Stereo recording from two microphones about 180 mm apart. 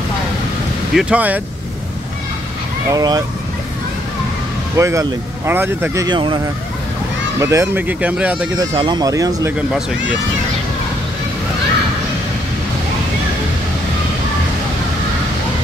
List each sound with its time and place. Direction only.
0.9 s speech: 5° right (ahead or behind)
2.9 s speech: 20° right (ahead or behind)
4.7 s speech: 15° right (ahead or behind)
6.0 s speech: 25° right (ahead or behind)
7.3 s speech: 15° right (ahead or behind)
8.7 s speech: 25° right (ahead or behind)